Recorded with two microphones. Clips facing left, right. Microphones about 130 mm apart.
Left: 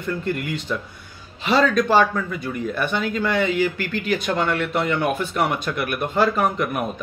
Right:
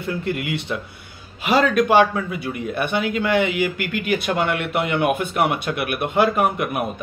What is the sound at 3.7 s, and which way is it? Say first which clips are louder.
Speech: right 1 dB; 35° left (ahead or behind).